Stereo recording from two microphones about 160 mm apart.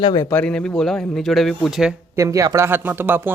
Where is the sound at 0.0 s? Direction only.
25° left (ahead or behind).